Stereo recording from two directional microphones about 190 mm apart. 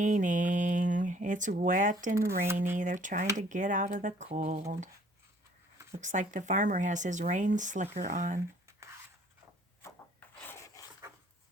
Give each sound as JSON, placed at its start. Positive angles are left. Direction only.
{"t": 0.0, "sound": "speech", "side_deg": -40}
{"t": 2.1, "sound": "speech", "side_deg": -15}
{"t": 2.7, "sound": "speech", "side_deg": -40}
{"t": 6.0, "sound": "speech", "side_deg": -40}
{"t": 9.8, "sound": "rub", "side_deg": 10}